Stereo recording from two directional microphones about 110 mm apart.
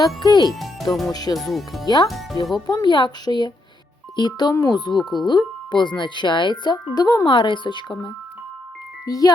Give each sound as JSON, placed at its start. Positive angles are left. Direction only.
{"t": 0.2, "sound": "a woman's voice", "side_deg": 40}
{"t": 0.6, "sound": "speech", "side_deg": 0}
{"t": 1.1, "sound": "a woman's voice", "side_deg": 35}
{"t": 1.5, "sound": "speech", "side_deg": 0}
{"t": 2.6, "sound": "a woman's voice", "side_deg": 40}
{"t": 4.9, "sound": "speech", "side_deg": 0}
{"t": 5.2, "sound": "speech", "side_deg": 40}
{"t": 9.0, "sound": "a woman's voice", "side_deg": 35}